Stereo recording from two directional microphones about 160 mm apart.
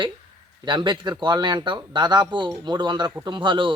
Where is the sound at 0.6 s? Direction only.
30° right (ahead or behind).